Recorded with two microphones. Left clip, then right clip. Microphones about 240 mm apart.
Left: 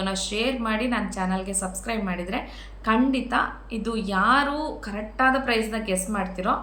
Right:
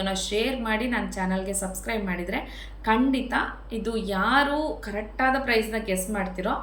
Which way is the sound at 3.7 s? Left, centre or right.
Centre.